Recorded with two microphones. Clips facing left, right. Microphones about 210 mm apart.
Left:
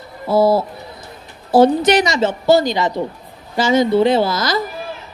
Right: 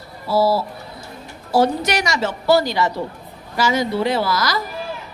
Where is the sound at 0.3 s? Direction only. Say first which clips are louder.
Left 4 dB; 20° left (ahead or behind).